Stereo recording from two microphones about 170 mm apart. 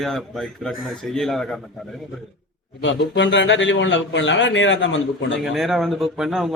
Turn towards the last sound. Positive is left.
turn(degrees=0)  # may be behind; listen again after turning